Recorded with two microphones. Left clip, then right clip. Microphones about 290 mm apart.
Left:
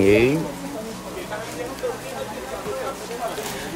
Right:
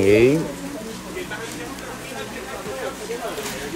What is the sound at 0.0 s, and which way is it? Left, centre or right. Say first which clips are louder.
Insect: right 1 dB; centre.